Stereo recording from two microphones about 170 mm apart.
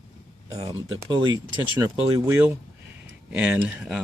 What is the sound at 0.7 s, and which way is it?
Speech, 25° right (ahead or behind).